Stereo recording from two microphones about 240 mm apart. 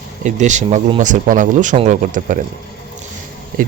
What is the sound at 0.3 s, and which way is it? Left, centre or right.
Speech, right.